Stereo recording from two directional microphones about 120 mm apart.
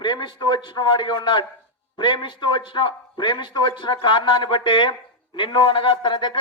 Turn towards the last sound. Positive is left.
turn(degrees=45)  # may be behind; listen again after turning